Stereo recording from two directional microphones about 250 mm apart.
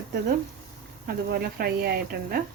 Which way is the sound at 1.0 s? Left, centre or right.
Right.